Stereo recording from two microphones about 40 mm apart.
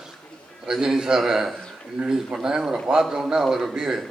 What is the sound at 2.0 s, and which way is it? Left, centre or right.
A man's voice, right.